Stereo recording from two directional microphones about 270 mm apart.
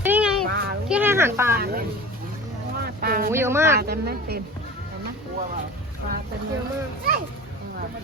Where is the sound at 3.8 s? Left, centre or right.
Right.